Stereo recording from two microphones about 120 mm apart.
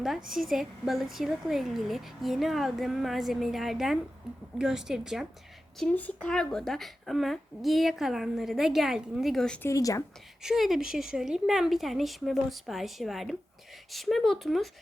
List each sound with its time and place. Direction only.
0.0 s a woman's voice: centre (ahead or behind)
5.8 s a woman's voice: 15° left (ahead or behind)
9.6 s a woman's voice: 30° left (ahead or behind)
10.4 s a woman's voice: 5° right (ahead or behind)